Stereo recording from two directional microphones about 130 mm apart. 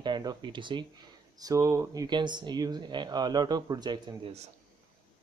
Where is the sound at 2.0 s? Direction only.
35° right (ahead or behind).